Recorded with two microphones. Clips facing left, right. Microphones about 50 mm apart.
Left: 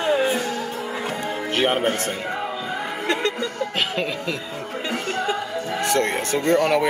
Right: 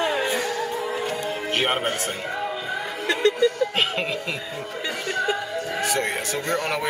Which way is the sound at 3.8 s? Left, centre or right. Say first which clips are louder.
Even; centre.